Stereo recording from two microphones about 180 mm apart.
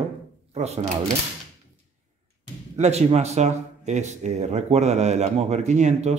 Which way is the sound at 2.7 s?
35° right (ahead or behind).